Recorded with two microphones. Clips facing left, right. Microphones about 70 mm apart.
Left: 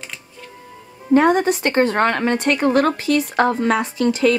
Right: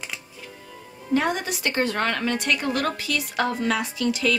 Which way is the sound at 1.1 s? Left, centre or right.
Left.